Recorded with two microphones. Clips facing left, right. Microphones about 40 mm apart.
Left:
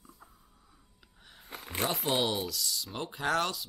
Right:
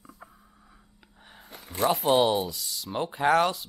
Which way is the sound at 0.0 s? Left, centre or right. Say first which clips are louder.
Right 6 dB; right.